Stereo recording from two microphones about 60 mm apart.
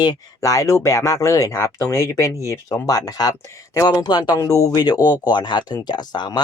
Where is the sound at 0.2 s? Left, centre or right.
Left.